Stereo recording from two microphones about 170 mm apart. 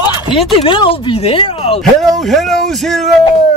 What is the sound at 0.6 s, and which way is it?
Music, 30° left (ahead or behind).